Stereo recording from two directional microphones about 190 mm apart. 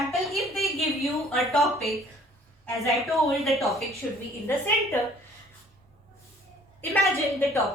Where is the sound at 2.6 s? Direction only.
15° left (ahead or behind).